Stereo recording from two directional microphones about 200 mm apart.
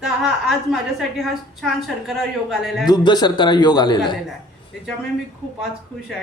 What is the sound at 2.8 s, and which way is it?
Speech, 20° left (ahead or behind).